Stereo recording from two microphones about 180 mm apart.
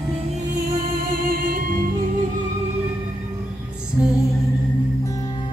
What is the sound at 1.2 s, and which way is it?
Music, 50° right (ahead or behind).